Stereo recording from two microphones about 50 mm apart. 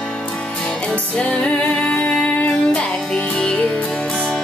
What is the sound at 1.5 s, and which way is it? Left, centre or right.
Music, centre.